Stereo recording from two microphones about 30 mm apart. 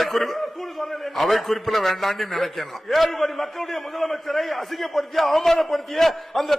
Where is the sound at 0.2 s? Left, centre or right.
Centre.